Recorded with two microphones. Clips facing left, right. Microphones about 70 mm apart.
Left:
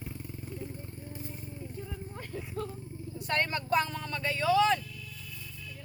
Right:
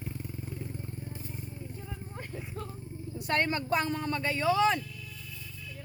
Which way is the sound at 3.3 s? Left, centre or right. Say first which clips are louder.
Even; right.